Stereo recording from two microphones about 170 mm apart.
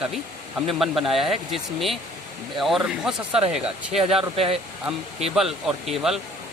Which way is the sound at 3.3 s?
35° right (ahead or behind).